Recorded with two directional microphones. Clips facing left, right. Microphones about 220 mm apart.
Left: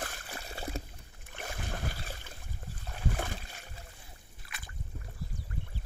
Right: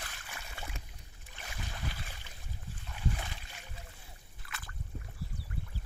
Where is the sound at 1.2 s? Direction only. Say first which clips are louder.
Left 6 dB; 50° left (ahead or behind).